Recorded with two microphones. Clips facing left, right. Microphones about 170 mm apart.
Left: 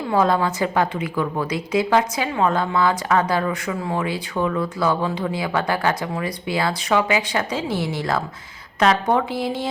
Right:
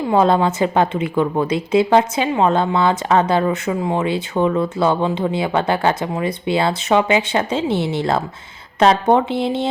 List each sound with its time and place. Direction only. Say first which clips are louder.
0.1 s speech: right 4 dB; 25° right (ahead or behind)